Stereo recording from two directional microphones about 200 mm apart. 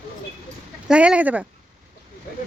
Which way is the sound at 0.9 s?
5° right (ahead or behind).